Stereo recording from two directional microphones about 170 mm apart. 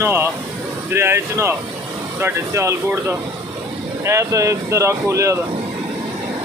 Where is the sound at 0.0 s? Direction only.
15° right (ahead or behind).